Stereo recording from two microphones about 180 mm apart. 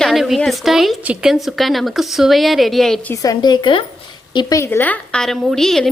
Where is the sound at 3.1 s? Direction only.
20° left (ahead or behind).